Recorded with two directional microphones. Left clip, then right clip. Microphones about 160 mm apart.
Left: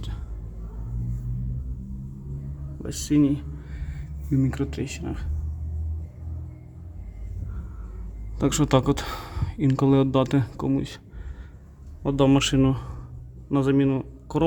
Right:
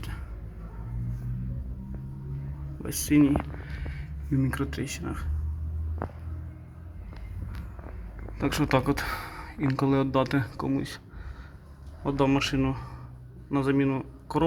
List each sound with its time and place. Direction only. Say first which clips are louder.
2.8 s speech: left 1 dB; 10° left (ahead or behind)
8.4 s speech: left 4 dB; 40° left (ahead or behind)
12.0 s speech: left 4 dB; 45° left (ahead or behind)
13.5 s a man's voice: left 4 dB; 35° left (ahead or behind)